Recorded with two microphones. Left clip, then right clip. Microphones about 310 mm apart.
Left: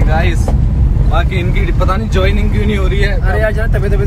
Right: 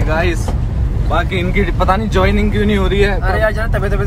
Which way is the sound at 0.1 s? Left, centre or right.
Centre.